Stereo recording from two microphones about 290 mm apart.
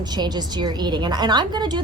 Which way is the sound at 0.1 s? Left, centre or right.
Centre.